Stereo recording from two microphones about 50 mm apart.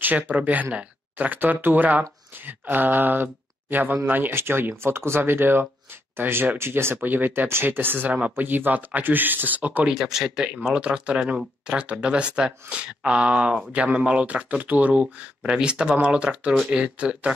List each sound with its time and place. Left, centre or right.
0.0 s speech: right
9.8 s speech: centre
14.6 s speech: right